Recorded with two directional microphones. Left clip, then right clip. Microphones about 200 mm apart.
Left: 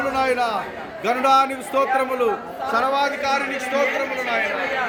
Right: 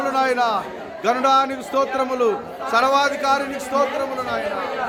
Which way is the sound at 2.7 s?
45° right (ahead or behind).